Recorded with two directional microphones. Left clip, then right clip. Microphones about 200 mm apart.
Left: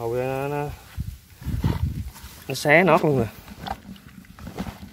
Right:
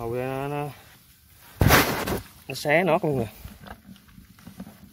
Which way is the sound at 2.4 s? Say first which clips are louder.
Left 5 dB; centre (ahead or behind).